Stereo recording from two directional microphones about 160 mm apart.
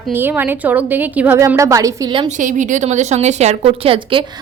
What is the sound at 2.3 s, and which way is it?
A woman's voice, 50° right (ahead or behind).